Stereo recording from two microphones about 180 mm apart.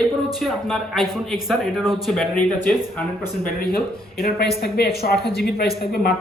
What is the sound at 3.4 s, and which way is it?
Speech, 55° left (ahead or behind).